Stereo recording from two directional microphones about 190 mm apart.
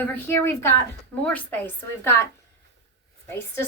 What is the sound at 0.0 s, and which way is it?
A woman's voice, 10° left (ahead or behind).